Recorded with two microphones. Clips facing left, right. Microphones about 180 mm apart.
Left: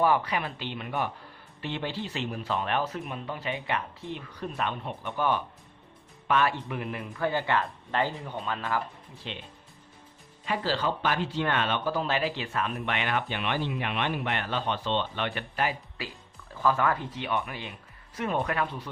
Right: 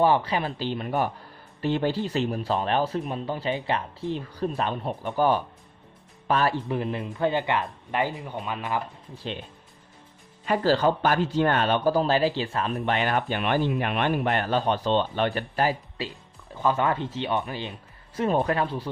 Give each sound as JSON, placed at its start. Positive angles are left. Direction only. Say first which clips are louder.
{"t": 0.0, "sound": "speech", "louder": "right 3 dB", "side_deg": -30}
{"t": 9.2, "sound": "speech", "louder": "right 6 dB", "side_deg": -40}
{"t": 10.4, "sound": "speech", "louder": "right 7 dB", "side_deg": -45}
{"t": 16.6, "sound": "speech", "louder": "right 2 dB", "side_deg": -20}